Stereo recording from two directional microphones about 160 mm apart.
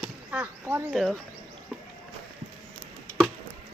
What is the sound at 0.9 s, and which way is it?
Speech, centre (ahead or behind).